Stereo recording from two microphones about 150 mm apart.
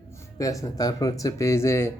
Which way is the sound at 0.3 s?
20° left (ahead or behind).